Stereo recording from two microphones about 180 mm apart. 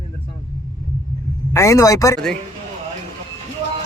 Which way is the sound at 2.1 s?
5° left (ahead or behind).